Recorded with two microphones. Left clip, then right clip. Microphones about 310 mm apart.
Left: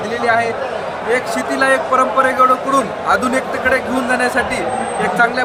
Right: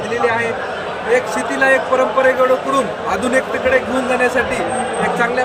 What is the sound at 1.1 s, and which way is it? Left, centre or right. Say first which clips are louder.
Speech: right 1 dB; centre.